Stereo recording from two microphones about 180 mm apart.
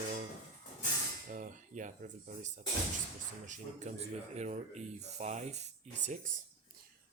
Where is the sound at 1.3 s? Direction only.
45° right (ahead or behind).